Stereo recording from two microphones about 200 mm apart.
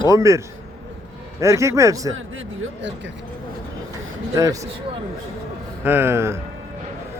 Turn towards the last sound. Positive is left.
turn(degrees=-15)  # may be behind; listen again after turning